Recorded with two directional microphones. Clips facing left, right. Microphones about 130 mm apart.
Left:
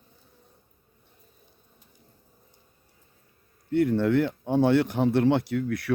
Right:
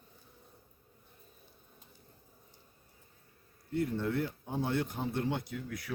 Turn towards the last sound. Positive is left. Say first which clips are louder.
# left 13 dB
turn(degrees=75)  # may be behind; listen again after turning